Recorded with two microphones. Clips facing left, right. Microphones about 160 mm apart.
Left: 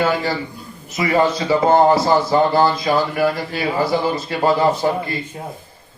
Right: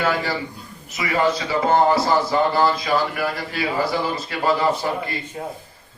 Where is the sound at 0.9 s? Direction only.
30° left (ahead or behind).